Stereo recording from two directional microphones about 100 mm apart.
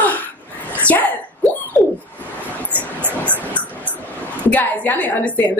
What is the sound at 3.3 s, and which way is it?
Dog, 15° left (ahead or behind).